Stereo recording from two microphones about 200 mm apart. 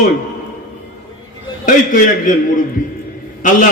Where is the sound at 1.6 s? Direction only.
40° left (ahead or behind).